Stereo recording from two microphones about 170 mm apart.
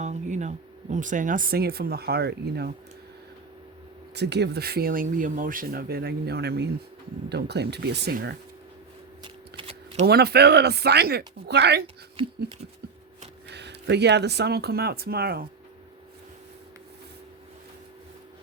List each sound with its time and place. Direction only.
0.0 s speech: 45° right (ahead or behind); by 2.7 s 65° right (ahead or behind)
4.1 s speech: 80° right
9.2 s shuffling cards: 30° right (ahead or behind)
10.1 s speech: 70° right (ahead or behind)
13.5 s speech: 85° right; by 15.4 s 65° right (ahead or behind)